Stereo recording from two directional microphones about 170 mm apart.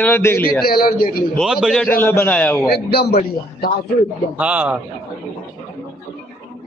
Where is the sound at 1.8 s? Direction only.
15° left (ahead or behind).